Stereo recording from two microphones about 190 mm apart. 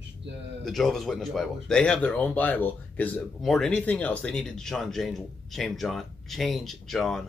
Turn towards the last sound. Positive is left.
turn(degrees=0)  # may be behind; listen again after turning